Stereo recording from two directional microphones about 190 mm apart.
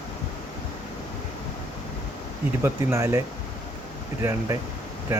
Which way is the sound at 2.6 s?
15° right (ahead or behind).